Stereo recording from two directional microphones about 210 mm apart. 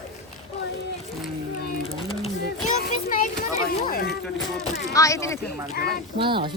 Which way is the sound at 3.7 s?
45° left (ahead or behind).